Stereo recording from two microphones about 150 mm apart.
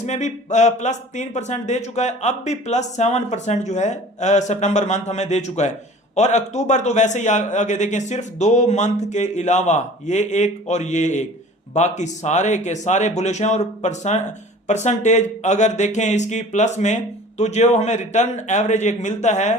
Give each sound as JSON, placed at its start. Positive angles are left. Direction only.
{"t": 0.0, "sound": "speech", "side_deg": 50}